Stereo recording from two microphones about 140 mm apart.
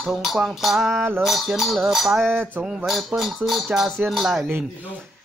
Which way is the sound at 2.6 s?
Centre (ahead or behind).